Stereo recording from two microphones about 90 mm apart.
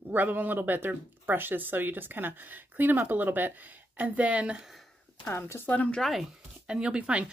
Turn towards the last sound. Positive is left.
turn(degrees=-10)  # may be behind; listen again after turning